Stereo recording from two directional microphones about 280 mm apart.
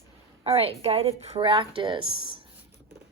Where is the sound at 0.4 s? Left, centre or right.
Right.